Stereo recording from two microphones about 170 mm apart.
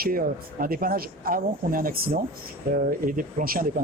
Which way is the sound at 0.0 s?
60° right (ahead or behind).